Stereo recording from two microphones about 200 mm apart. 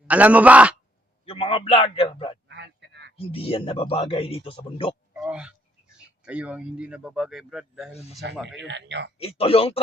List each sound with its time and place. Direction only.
0.1 s a man's voice: 5° right (ahead or behind)
1.2 s a man's voice: 30° left (ahead or behind)
2.5 s a sound: 60° right (ahead or behind)
3.2 s a man's voice: 30° left (ahead or behind)
5.2 s a sound: 5° right (ahead or behind)
6.2 s speech: 5° right (ahead or behind)
8.6 s speech: 60° right (ahead or behind)
9.1 s a man's voice: 30° left (ahead or behind)